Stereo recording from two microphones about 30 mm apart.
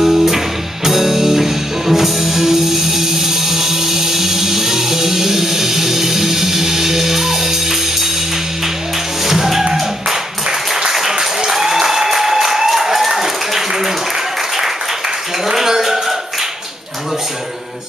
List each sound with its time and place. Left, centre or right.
0.0 s music: centre
9.2 s music: centre
10.9 s applause: centre
15.4 s a sound: centre